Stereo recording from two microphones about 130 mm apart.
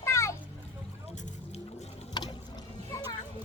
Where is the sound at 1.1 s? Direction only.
60° left (ahead or behind).